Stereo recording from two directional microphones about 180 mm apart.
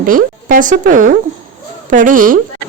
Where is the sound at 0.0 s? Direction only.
50° right (ahead or behind).